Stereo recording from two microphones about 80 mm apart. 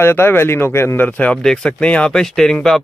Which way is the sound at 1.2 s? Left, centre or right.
Centre.